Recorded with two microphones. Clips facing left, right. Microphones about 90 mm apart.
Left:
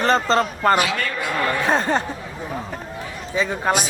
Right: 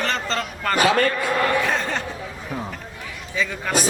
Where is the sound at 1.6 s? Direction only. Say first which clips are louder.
Left 4 dB; 35° left (ahead or behind).